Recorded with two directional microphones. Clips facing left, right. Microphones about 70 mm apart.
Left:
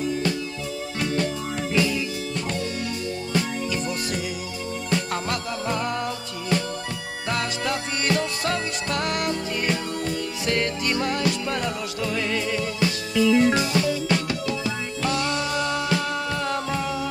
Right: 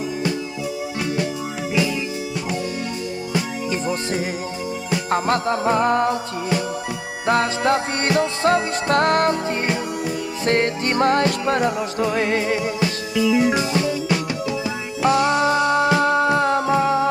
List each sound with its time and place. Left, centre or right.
5.1 s music: right
7.2 s music: right
13.2 s music: centre
15.0 s music: right